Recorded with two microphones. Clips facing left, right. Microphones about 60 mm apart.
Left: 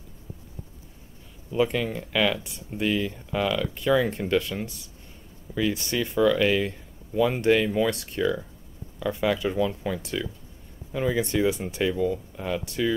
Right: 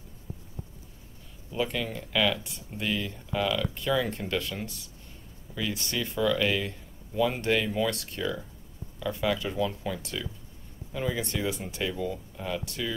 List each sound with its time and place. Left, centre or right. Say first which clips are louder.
1.6 s speech: left 6 dB; left